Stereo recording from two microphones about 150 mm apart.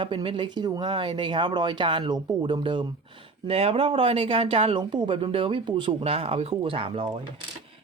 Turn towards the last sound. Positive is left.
turn(degrees=-35)  # may be behind; listen again after turning